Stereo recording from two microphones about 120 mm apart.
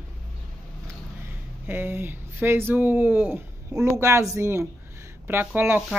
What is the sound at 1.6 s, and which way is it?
Speech, 20° right (ahead or behind).